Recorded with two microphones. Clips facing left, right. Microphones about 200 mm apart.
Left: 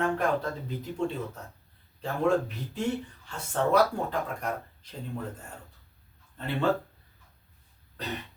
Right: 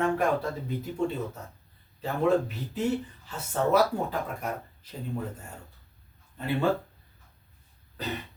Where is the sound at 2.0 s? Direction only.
5° right (ahead or behind).